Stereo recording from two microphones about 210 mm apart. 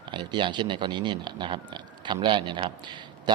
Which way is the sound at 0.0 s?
20° right (ahead or behind).